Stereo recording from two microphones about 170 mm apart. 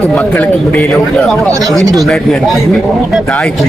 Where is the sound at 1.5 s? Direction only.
20° right (ahead or behind).